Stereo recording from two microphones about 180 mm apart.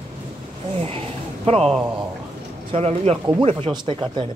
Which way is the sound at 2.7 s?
35° right (ahead or behind).